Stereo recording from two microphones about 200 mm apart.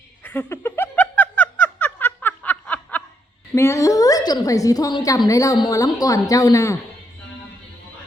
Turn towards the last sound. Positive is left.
turn(degrees=15)  # may be behind; listen again after turning